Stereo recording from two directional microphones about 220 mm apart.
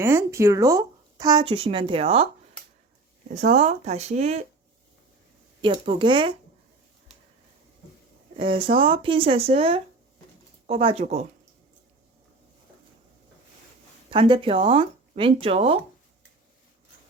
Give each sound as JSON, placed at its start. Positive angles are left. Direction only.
{"t": 0.0, "sound": "speech", "side_deg": -10}
{"t": 3.3, "sound": "speech", "side_deg": -30}
{"t": 5.6, "sound": "speech", "side_deg": -25}
{"t": 8.4, "sound": "speech", "side_deg": -25}
{"t": 14.1, "sound": "speech", "side_deg": -20}